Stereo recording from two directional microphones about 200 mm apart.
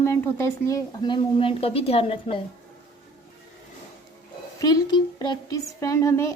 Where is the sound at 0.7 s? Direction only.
20° left (ahead or behind).